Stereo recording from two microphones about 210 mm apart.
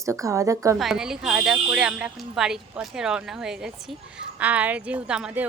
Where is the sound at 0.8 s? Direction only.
Centre (ahead or behind).